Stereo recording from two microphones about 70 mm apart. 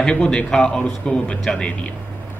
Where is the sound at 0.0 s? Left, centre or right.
Centre.